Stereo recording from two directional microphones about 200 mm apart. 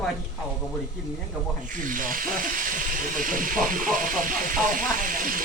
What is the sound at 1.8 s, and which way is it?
Speech, 45° right (ahead or behind).